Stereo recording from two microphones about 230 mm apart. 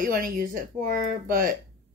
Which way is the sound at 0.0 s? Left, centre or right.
Right.